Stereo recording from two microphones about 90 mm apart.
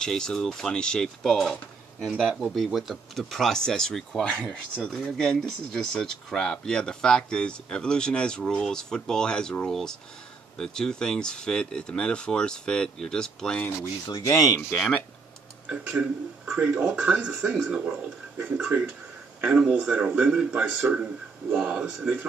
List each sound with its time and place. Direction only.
0.0 s speech: 10° left (ahead or behind)
14.0 s speech: 45° left (ahead or behind)
14.7 s speech: 15° left (ahead or behind)
15.7 s speech: 10° right (ahead or behind)
19.4 s a man's voice: 5° right (ahead or behind)